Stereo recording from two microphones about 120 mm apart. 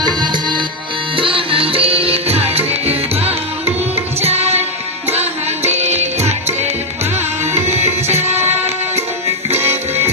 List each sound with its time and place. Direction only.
0.0 s music: 35° right (ahead or behind)
1.1 s music: 45° right (ahead or behind)
4.2 s tabla: 60° right (ahead or behind)
5.6 s music: 65° right (ahead or behind)
7.7 s tabla: 65° right (ahead or behind)
8.0 s music: 20° right (ahead or behind)
9.6 s music: 20° right (ahead or behind)